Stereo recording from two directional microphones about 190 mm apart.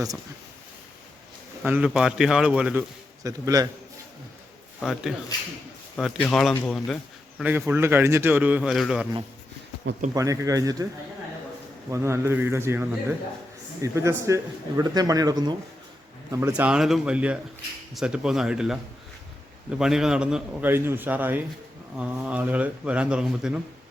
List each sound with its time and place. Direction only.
1.6 s a man's voice: 10° right (ahead or behind)
3.2 s a man's voice: 20° right (ahead or behind)
4.8 s a man's voice: centre (ahead or behind)
6.2 s a man's voice: 5° left (ahead or behind)
7.5 s a man's voice: 10° right (ahead or behind)
10.2 s a man's voice: 15° right (ahead or behind)
11.9 s a man's voice: 15° right (ahead or behind)
16.5 s a man's voice: 5° right (ahead or behind)
19.8 s a man's voice: 5° right (ahead or behind)